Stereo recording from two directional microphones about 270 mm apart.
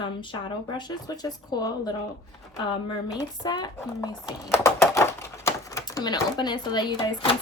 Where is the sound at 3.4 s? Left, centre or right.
Centre.